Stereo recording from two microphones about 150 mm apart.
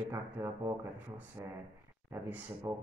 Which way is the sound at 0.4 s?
15° right (ahead or behind).